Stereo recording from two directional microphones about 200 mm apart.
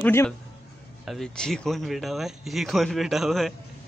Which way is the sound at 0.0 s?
10° left (ahead or behind).